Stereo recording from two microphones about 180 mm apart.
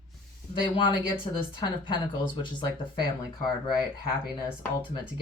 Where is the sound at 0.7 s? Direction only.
25° left (ahead or behind).